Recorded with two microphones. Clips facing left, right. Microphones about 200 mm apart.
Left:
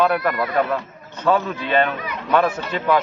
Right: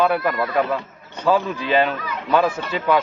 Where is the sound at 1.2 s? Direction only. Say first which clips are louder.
Even; 5° right (ahead or behind).